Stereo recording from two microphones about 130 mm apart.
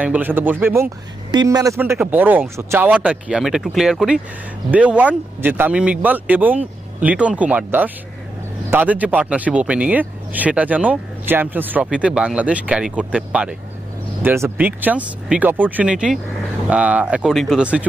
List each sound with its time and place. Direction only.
0.0 s speech: 10° right (ahead or behind)
1.3 s a man's voice: 30° right (ahead or behind)
2.0 s speech: 15° right (ahead or behind)
14.2 s speech: 20° right (ahead or behind)